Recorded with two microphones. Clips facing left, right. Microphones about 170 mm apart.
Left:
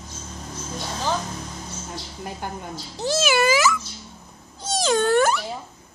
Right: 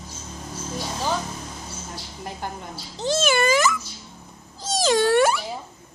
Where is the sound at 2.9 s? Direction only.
10° left (ahead or behind).